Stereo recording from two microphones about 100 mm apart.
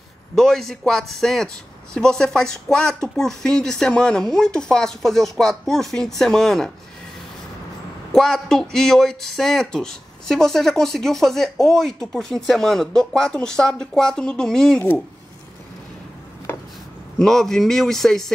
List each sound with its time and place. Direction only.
0.4 s speech: 5° left (ahead or behind)
8.1 s speech: 5° left (ahead or behind)
16.5 s a sound: 20° left (ahead or behind)
17.2 s speech: 5° left (ahead or behind)